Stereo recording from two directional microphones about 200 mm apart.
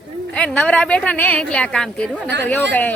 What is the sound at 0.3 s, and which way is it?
A woman's voice, 5° left (ahead or behind).